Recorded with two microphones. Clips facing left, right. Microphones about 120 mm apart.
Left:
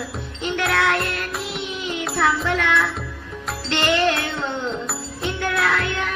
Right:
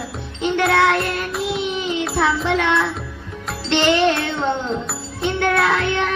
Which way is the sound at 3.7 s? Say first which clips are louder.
Right 4 dB; centre (ahead or behind).